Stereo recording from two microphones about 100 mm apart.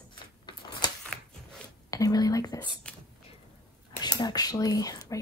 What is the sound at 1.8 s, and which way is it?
Speech, 35° left (ahead or behind).